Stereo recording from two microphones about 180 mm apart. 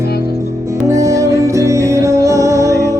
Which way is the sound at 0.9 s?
15° right (ahead or behind).